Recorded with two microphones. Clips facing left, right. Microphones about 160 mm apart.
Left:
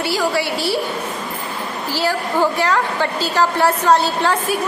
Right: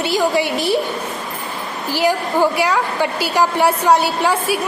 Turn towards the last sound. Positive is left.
turn(degrees=-10)  # may be behind; listen again after turning